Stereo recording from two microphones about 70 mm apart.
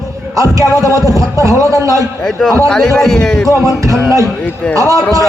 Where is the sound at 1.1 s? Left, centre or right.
Right.